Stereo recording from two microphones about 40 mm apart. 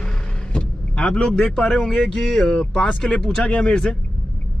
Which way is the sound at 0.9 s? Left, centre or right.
Left.